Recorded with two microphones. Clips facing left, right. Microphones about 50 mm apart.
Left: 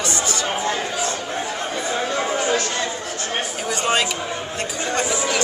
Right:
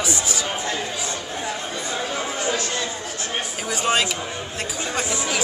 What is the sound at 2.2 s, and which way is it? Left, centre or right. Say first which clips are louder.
Chatter: left 5 dB; left.